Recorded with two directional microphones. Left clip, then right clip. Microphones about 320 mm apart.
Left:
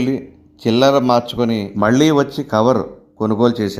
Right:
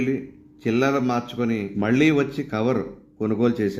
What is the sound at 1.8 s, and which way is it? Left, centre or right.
Speech, centre.